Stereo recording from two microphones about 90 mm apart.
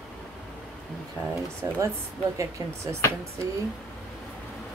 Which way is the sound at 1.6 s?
45° right (ahead or behind).